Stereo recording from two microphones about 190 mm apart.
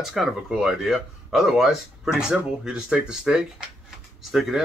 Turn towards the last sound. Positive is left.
turn(degrees=0)  # may be behind; listen again after turning